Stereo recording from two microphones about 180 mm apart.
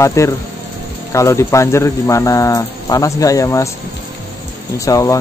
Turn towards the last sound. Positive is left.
turn(degrees=15)  # may be behind; listen again after turning